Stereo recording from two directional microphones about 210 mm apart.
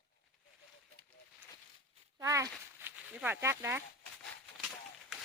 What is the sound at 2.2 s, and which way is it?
Speech, 15° right (ahead or behind).